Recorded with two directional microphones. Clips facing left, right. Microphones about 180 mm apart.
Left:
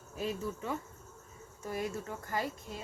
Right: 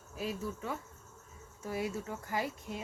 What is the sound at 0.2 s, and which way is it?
Cricket, centre (ahead or behind).